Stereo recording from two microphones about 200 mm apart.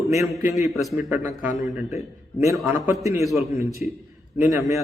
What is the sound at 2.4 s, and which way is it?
Speech, 15° right (ahead or behind).